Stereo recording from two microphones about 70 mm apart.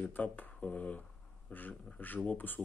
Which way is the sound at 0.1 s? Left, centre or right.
Left.